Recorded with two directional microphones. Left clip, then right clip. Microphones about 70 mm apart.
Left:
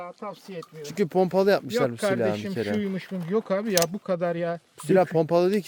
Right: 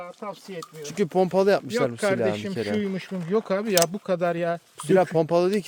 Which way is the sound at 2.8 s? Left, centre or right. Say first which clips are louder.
Right 2 dB; right.